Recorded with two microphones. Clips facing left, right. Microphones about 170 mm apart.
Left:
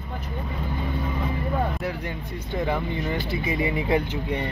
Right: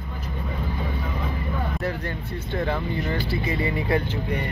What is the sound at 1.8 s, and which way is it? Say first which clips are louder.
Speech: right 1 dB; 10° left (ahead or behind).